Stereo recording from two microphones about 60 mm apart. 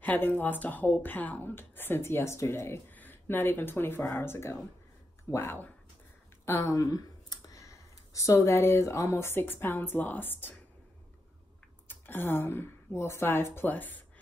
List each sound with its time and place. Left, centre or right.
0.0 s a woman's voice: left
2.9 s speech: left
6.4 s speech: left
9.2 s a woman's voice: left
11.9 s speech: left